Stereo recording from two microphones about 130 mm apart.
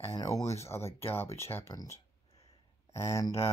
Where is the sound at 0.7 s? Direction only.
20° left (ahead or behind).